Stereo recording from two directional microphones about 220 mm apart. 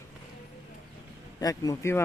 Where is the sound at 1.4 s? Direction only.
15° left (ahead or behind).